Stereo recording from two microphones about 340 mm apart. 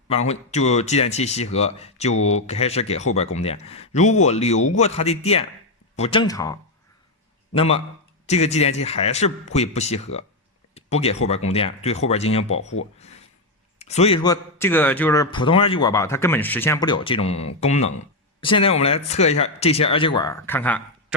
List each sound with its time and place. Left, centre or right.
0.1 s a man's voice: centre
10.8 s a sound: centre
11.3 s a man's voice: centre
13.7 s a man's voice: centre